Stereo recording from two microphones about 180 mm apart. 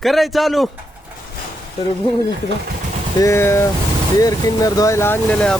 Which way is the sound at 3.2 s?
15° left (ahead or behind).